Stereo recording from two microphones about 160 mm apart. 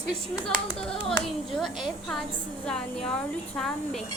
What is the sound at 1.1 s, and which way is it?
A woman's voice, centre (ahead or behind).